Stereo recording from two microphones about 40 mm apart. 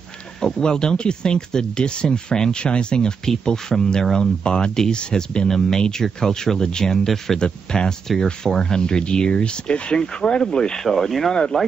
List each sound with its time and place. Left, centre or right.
0.4 s speech: centre
10.9 s speech: centre